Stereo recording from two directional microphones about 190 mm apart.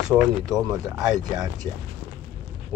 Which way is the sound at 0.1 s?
5° right (ahead or behind).